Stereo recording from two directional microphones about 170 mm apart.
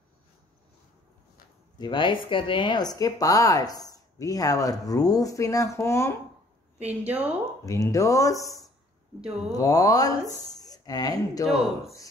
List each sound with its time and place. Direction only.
1.8 s speech: 25° left (ahead or behind)
6.8 s speech: 10° right (ahead or behind)
7.6 s speech: 20° left (ahead or behind)
9.5 s speech: 20° left (ahead or behind)
11.4 s speech: centre (ahead or behind)